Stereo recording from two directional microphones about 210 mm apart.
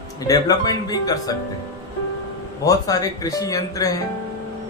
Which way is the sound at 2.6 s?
15° left (ahead or behind).